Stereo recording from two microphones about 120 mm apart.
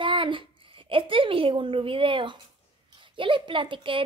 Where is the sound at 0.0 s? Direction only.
45° right (ahead or behind).